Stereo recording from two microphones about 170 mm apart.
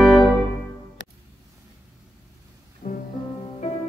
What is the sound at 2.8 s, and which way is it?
Music, 45° left (ahead or behind).